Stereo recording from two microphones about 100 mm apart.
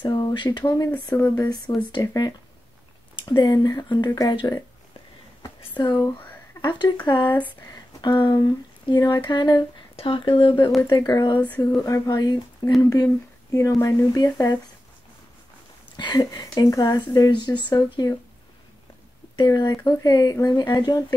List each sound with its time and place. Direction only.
0.0 s speech: 45° left (ahead or behind)
0.9 s speech: 25° left (ahead or behind)
1.4 s speech: 45° left (ahead or behind)
5.8 s speech: 50° left (ahead or behind)
7.2 s speech: 15° left (ahead or behind)
7.6 s speech: 45° left (ahead or behind)
10.9 s speech: 40° left (ahead or behind)
16.0 s speech: 45° left (ahead or behind)
19.3 s speech: 40° left (ahead or behind)